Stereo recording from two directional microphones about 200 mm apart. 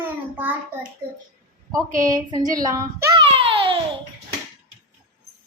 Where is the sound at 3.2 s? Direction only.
30° right (ahead or behind).